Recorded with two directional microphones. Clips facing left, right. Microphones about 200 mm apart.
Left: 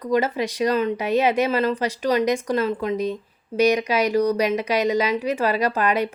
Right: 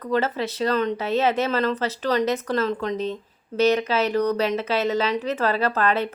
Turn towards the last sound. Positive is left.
turn(degrees=15)  # may be behind; listen again after turning